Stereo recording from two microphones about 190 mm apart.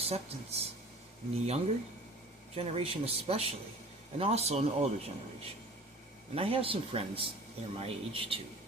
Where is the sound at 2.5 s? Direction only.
30° right (ahead or behind).